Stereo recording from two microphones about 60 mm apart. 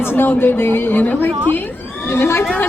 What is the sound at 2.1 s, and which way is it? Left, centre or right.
Speech, left.